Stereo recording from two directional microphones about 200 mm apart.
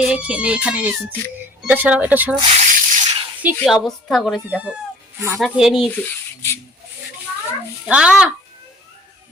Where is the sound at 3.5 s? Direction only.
Centre (ahead or behind).